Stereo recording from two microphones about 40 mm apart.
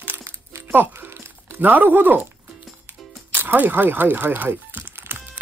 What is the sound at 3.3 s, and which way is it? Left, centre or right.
Music, right.